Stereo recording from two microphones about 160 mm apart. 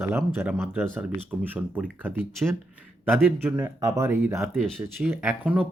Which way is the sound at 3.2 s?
15° right (ahead or behind).